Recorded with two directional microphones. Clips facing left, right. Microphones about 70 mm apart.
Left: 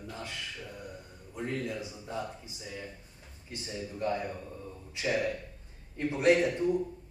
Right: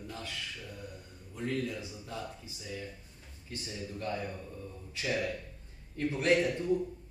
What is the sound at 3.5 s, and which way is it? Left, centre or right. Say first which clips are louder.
Speech: left 2 dB; left.